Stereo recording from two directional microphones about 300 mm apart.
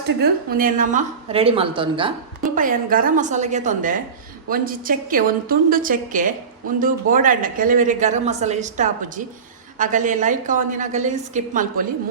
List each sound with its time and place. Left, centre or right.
0.2 s a woman's voice: right